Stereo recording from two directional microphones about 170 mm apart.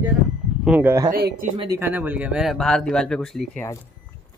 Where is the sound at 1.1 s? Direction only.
60° right (ahead or behind).